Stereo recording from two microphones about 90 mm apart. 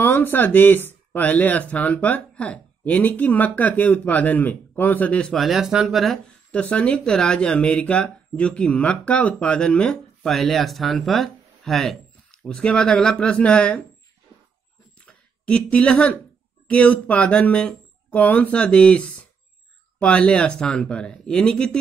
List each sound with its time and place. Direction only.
0.0 s speech: 20° left (ahead or behind)
5.3 s speech: centre (ahead or behind)
6.2 s speech: 15° left (ahead or behind)
15.0 s speech: 10° left (ahead or behind)